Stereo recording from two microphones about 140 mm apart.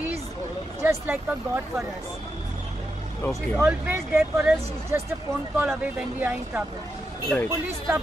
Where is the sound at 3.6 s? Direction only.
15° right (ahead or behind).